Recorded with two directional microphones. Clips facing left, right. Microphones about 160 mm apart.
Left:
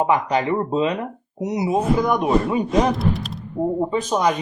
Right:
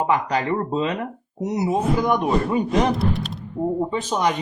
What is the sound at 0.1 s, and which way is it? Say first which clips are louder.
Speech: left 2 dB; 25° left (ahead or behind).